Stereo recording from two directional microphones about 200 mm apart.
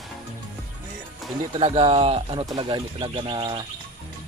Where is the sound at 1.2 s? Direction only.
Centre (ahead or behind).